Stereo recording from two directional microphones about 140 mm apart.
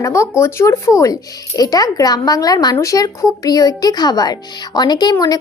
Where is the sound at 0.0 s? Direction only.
20° left (ahead or behind).